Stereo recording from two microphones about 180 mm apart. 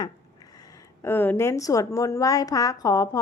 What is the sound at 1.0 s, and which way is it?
A woman's voice, 10° left (ahead or behind).